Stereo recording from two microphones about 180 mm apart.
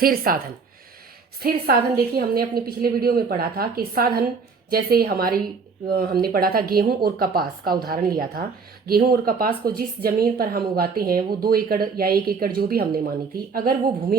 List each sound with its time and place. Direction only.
0.0 s a woman's voice: 55° right (ahead or behind)